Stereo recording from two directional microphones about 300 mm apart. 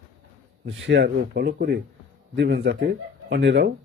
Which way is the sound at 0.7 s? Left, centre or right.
Right.